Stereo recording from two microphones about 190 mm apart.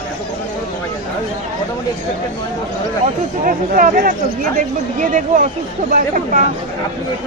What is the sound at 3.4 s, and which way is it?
Speech, 50° right (ahead or behind).